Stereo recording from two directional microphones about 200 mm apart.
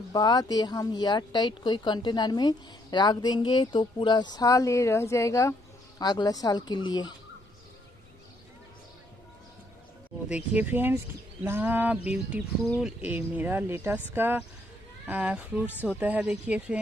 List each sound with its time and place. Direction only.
0.1 s speech: 20° left (ahead or behind)
10.2 s speech: 5° right (ahead or behind)